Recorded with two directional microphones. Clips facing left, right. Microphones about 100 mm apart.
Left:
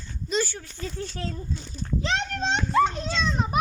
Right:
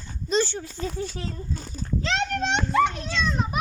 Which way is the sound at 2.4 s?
75° right (ahead or behind).